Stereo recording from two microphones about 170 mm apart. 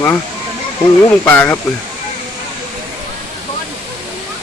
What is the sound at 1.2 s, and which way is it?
Speech, 10° left (ahead or behind).